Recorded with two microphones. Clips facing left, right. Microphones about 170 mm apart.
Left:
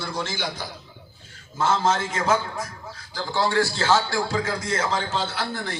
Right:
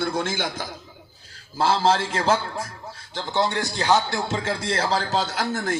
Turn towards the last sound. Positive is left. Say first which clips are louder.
# right 4 dB
turn(degrees=-45)  # may be behind; listen again after turning